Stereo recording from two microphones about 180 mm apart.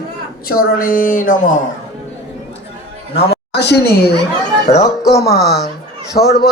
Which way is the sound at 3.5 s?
70° left (ahead or behind).